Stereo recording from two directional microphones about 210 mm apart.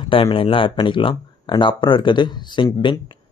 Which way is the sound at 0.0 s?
25° left (ahead or behind).